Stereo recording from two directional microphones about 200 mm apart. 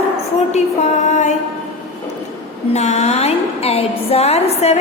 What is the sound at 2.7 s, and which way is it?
A woman's voice, 35° left (ahead or behind).